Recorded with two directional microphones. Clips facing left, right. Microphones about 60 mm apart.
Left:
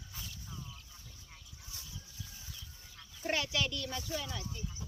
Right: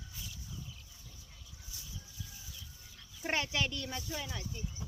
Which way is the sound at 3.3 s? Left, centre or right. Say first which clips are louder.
Even; right.